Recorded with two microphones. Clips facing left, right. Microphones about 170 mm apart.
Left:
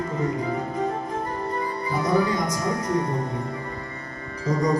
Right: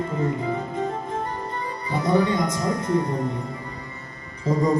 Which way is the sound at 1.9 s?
25° right (ahead or behind).